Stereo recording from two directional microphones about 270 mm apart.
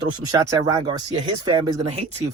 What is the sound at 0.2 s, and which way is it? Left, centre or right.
Speech, centre.